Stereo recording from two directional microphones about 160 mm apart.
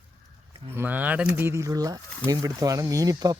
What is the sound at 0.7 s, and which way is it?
Speech, 10° right (ahead or behind).